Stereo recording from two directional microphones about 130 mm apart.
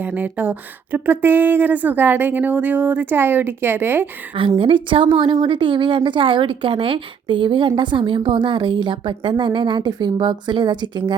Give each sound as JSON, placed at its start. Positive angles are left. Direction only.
{"t": 0.0, "sound": "speech", "side_deg": -10}
{"t": 4.4, "sound": "a woman's voice", "side_deg": -40}